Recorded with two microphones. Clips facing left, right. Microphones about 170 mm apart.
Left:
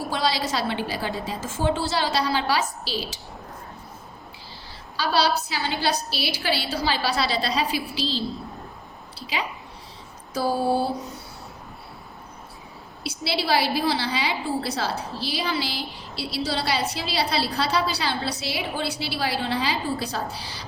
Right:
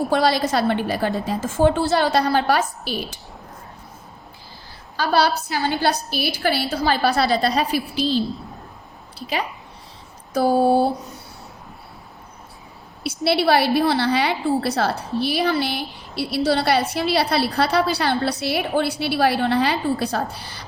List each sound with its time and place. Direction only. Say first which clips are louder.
0.1 s a woman's voice: right 5 dB; 55° right (ahead or behind)
4.9 s a woman's voice: right 3 dB; 50° right (ahead or behind)
13.2 s a woman's voice: right 6 dB; 60° right (ahead or behind)